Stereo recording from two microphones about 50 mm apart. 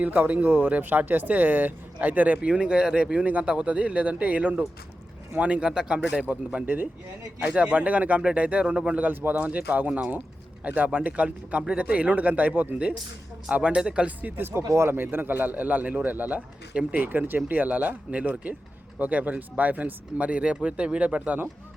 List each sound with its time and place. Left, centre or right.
0.0 s speech: right
2.5 s speech: centre
8.6 s speech: centre
9.0 s speech: right; by 14.1 s centre
14.2 s speech: right
14.7 s speech: right
14.9 s speech: right
21.2 s speech: right